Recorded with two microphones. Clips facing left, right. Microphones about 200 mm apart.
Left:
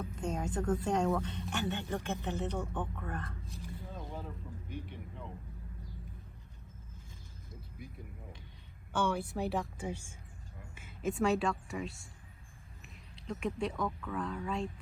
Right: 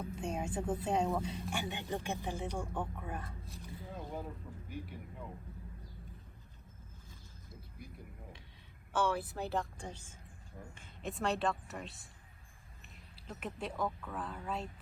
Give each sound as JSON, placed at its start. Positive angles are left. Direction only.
{"t": 0.0, "sound": "a woman's voice", "side_deg": -10}
{"t": 3.9, "sound": "a sound", "side_deg": -10}
{"t": 4.7, "sound": "speech", "side_deg": -5}
{"t": 9.0, "sound": "a woman's voice", "side_deg": 0}
{"t": 13.2, "sound": "speech", "side_deg": -5}